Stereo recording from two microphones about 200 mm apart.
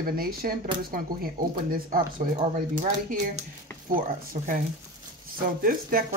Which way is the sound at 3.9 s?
45° right (ahead or behind).